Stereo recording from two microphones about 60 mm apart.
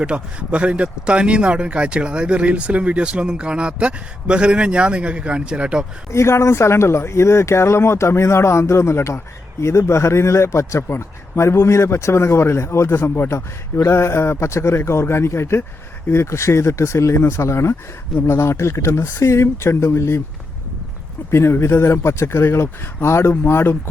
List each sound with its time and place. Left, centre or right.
0.0 s speech: centre
6.1 s speech: left
21.2 s speech: left